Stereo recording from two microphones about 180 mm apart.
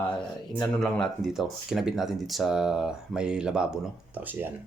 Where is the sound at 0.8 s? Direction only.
Centre (ahead or behind).